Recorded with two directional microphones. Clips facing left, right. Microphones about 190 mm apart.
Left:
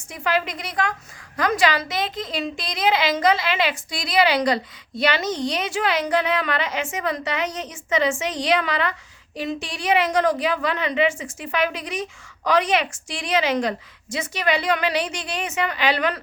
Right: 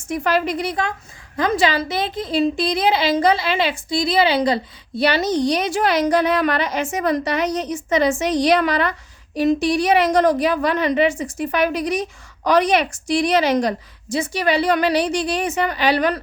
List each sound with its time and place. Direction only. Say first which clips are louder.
0.1 s a woman's voice: right 5 dB; 40° right (ahead or behind)